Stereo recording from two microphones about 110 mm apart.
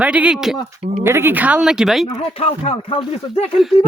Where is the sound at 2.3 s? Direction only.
70° left (ahead or behind).